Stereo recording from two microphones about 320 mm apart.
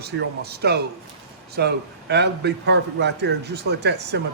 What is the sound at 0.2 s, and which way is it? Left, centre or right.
A man's voice, right.